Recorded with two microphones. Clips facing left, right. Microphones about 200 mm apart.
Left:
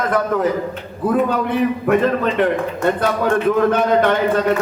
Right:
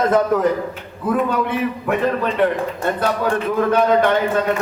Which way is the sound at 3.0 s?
50° left (ahead or behind).